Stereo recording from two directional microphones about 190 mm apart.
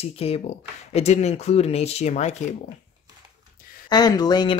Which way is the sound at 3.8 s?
20° left (ahead or behind).